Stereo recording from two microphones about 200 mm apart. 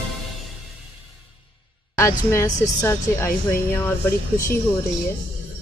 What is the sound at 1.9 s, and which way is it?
A woman's voice, 15° left (ahead or behind).